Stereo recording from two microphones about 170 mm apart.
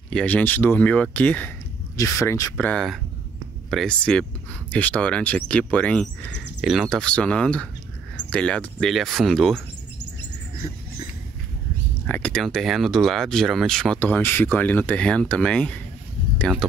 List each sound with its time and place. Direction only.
0.1 s speech: 10° left (ahead or behind)
2.5 s speech: 5° left (ahead or behind)
12.1 s speech: 5° left (ahead or behind)